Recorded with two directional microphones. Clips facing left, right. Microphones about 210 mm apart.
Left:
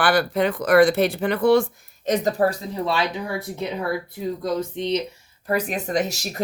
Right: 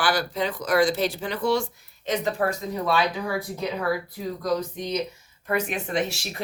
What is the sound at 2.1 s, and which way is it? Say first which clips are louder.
Speech: left 5 dB; 40° left (ahead or behind).